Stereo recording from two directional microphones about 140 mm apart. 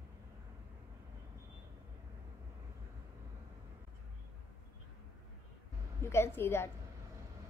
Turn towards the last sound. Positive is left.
turn(degrees=15)  # may be behind; listen again after turning